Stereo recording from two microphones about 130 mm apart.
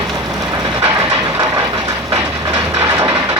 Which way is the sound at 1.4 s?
30° right (ahead or behind).